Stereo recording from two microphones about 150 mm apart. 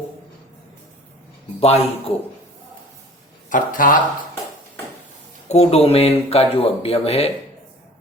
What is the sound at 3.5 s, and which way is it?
Speech, 65° left (ahead or behind).